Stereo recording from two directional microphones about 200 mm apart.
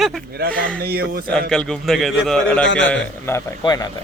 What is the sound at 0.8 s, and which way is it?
Speech, 50° right (ahead or behind).